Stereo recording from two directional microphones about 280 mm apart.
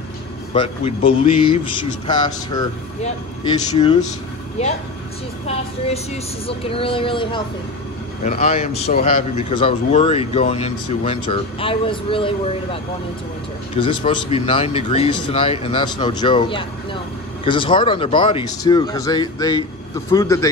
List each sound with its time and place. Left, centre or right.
0.5 s speech: centre
6.4 s speech: centre
13.7 s speech: centre